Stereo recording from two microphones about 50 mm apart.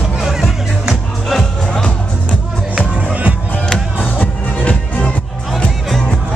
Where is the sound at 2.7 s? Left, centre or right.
Right.